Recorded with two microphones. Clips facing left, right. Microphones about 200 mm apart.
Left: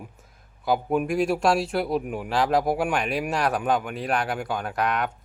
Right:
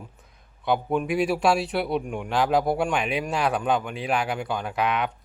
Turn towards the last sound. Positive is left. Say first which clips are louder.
# even
turn(degrees=0)  # may be behind; listen again after turning